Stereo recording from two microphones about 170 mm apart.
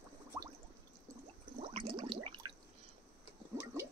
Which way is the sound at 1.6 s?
35° right (ahead or behind).